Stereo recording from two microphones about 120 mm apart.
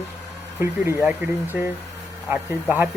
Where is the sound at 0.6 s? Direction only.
25° right (ahead or behind).